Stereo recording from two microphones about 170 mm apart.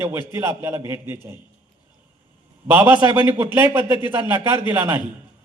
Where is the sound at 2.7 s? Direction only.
10° right (ahead or behind).